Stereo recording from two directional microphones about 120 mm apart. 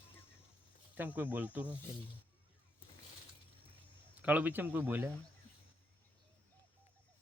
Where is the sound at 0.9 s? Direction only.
15° right (ahead or behind).